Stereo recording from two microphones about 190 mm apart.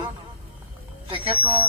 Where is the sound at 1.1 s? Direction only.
25° right (ahead or behind).